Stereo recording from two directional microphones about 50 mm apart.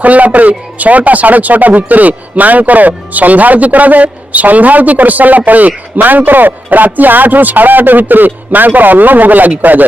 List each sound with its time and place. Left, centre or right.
0.0 s speech: right